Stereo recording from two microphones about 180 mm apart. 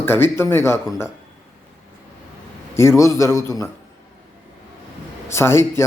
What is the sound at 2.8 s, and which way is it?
Speech, 15° left (ahead or behind).